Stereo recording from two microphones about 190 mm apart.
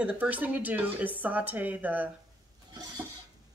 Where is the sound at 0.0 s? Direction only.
10° right (ahead or behind).